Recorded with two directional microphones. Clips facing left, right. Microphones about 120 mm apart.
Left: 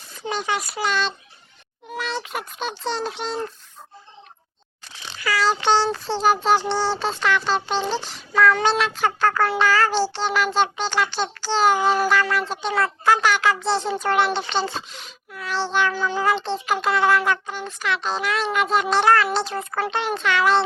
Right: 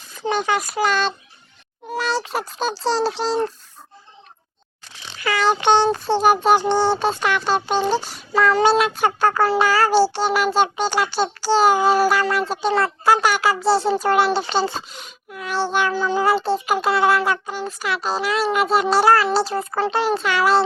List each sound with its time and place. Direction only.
0.3 s speech: 50° right (ahead or behind)
1.9 s a child's voice: 35° right (ahead or behind)
5.2 s a child's voice: 20° right (ahead or behind); by 14.7 s 5° right (ahead or behind)
14.8 s speech: 45° right (ahead or behind)
15.3 s a child's voice: 15° right (ahead or behind)